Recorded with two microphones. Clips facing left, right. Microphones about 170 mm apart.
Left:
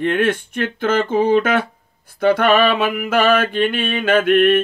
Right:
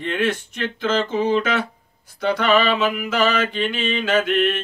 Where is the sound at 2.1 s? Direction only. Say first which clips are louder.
Left 4 dB; 55° left (ahead or behind).